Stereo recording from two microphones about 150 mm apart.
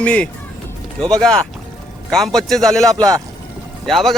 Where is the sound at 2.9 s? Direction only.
25° right (ahead or behind).